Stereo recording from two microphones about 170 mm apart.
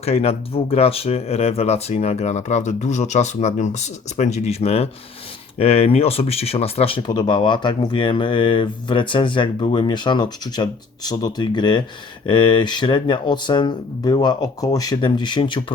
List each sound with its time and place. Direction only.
0.0 s speech: 35° left (ahead or behind)